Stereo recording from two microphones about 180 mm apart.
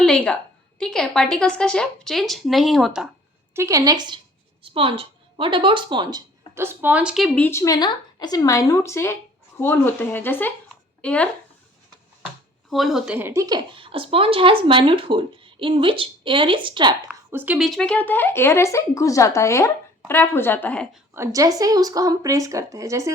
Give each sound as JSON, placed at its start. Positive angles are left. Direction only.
{"t": 0.0, "sound": "a woman's voice", "side_deg": 5}
{"t": 3.5, "sound": "a woman's voice", "side_deg": -15}
{"t": 7.3, "sound": "speech", "side_deg": 10}
{"t": 12.7, "sound": "speech", "side_deg": 0}
{"t": 17.3, "sound": "speech", "side_deg": -10}
{"t": 21.1, "sound": "speech", "side_deg": -15}